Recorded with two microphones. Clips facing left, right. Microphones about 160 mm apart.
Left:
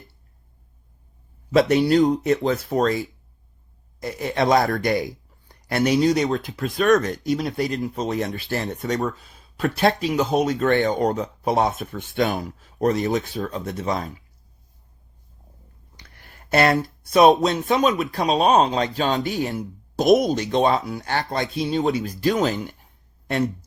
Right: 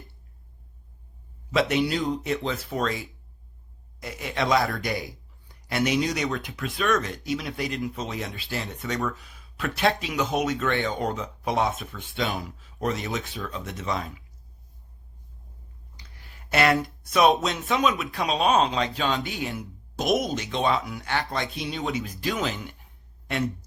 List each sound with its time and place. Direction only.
1.5 s speech: 40° left (ahead or behind)
4.0 s speech: 40° left (ahead or behind)
4.8 s speech: 55° left (ahead or behind)
5.6 s speech: 40° left (ahead or behind)
8.9 s speech: 35° left (ahead or behind)
16.0 s speech: 50° left (ahead or behind)